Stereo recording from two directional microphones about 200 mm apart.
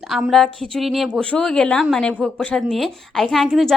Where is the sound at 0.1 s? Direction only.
Centre (ahead or behind).